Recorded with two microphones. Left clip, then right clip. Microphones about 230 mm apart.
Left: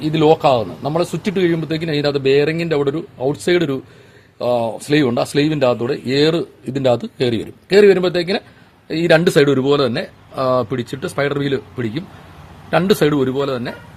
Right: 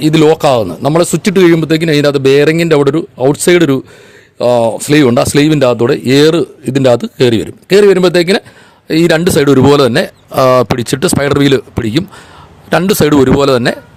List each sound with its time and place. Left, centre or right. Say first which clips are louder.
0.0 s speech: right 6 dB; right